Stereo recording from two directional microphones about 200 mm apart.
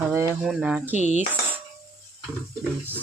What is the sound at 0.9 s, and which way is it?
Cutlery, 35° right (ahead or behind).